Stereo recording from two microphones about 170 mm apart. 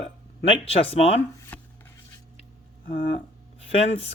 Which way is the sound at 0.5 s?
35° left (ahead or behind).